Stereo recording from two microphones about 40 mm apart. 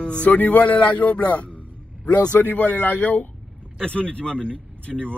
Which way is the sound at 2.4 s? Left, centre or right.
Left.